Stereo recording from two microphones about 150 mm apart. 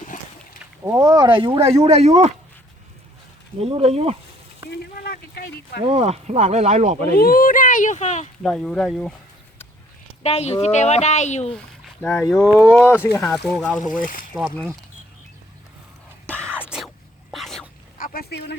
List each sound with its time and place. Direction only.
0.9 s speech: 25° right (ahead or behind); by 2.3 s 45° right (ahead or behind)
3.6 s speech: 40° right (ahead or behind)
5.0 s a sound: 90° left
5.8 s speech: 45° right (ahead or behind)
7.2 s speech: 75° left (ahead or behind); by 8.3 s 50° left (ahead or behind)
8.4 s speech: 5° left (ahead or behind)
10.2 s speech: 45° left (ahead or behind)
12.0 s speech: 15° left (ahead or behind)
13.8 s speech: 65° left (ahead or behind)
16.6 s a sound: 5° right (ahead or behind)
17.9 s a sound: 70° left (ahead or behind); by 18.5 s 90° left